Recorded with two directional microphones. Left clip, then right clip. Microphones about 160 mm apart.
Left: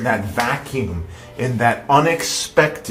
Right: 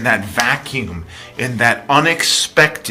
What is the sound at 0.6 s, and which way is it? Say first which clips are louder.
Speech: right 1 dB; 5° right (ahead or behind).